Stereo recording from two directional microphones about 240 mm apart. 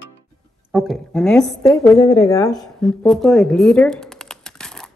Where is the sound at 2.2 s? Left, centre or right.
Centre.